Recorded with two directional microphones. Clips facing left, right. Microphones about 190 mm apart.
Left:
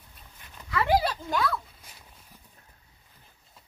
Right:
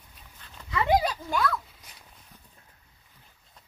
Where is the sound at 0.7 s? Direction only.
20° right (ahead or behind).